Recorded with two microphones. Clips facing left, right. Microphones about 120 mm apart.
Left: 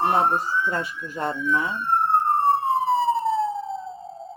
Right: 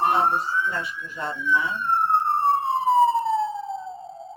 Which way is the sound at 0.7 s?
45° left (ahead or behind).